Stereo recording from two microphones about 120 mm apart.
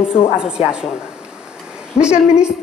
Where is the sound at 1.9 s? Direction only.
60° left (ahead or behind).